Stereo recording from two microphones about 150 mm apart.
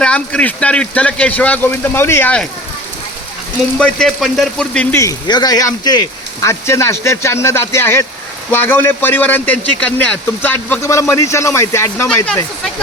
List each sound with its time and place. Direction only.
0.0 s a man's voice: 5° left (ahead or behind)
3.8 s speech: 5° left (ahead or behind)
4.9 s a man's voice: 25° left (ahead or behind)
12.1 s a man's voice: 10° left (ahead or behind)